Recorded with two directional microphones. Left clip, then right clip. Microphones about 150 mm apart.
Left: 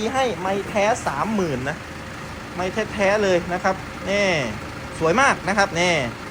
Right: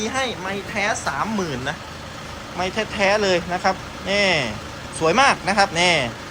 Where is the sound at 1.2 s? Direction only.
Centre (ahead or behind).